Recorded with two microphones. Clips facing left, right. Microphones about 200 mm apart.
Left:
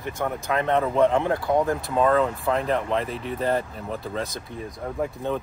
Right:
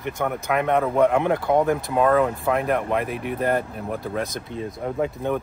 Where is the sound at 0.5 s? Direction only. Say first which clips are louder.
Right 1 dB; 15° right (ahead or behind).